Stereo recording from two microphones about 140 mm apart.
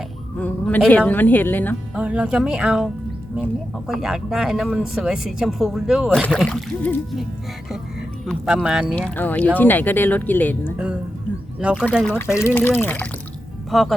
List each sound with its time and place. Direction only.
0.3 s speech: 10° left (ahead or behind)
2.0 s speech: 10° right (ahead or behind)
6.1 s speech: 5° left (ahead or behind)
8.4 s speech: 5° right (ahead or behind)
9.0 s speech: 10° left (ahead or behind)
11.6 s speech: 5° right (ahead or behind)
12.0 s speech: 15° left (ahead or behind)
13.7 s speech: centre (ahead or behind)